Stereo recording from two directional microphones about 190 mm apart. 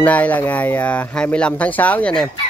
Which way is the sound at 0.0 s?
5° left (ahead or behind).